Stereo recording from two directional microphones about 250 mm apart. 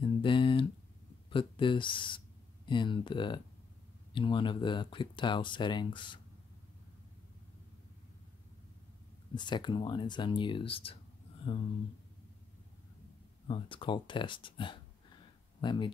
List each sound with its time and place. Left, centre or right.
0.0 s a sound: centre
1.3 s speech: centre
9.3 s speech: centre
13.5 s speech: centre